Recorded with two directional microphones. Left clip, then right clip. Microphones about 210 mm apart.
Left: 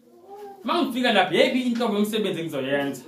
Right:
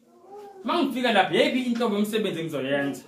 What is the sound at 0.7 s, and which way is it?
A man's voice, centre (ahead or behind).